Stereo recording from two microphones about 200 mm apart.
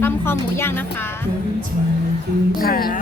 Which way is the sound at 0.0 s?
10° left (ahead or behind).